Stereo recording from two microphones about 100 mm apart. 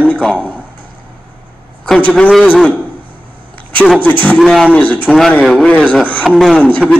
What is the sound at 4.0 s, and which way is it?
Speech, 15° left (ahead or behind).